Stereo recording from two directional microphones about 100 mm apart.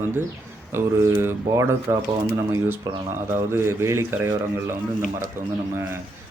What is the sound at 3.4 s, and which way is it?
A man's voice, 25° right (ahead or behind).